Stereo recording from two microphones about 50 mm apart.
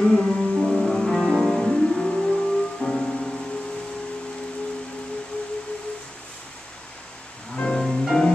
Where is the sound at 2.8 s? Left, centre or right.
Left.